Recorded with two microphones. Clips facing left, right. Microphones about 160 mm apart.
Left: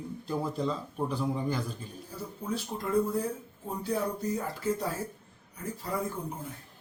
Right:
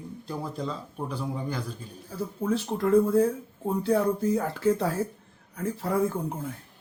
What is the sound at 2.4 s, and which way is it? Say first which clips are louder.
Speech: right 8 dB; 75° right (ahead or behind).